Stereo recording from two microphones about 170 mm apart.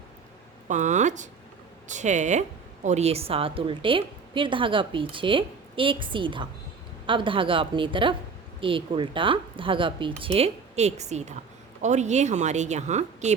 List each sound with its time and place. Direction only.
0.7 s a woman's voice: 45° right (ahead or behind)